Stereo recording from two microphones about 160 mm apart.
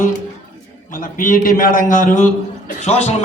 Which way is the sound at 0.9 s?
60° left (ahead or behind).